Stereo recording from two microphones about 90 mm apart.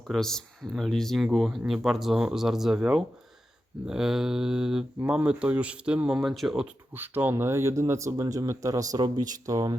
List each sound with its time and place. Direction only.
0.1 s speech: 5° left (ahead or behind)
6.9 s speech: 20° right (ahead or behind); by 9.7 s 40° right (ahead or behind)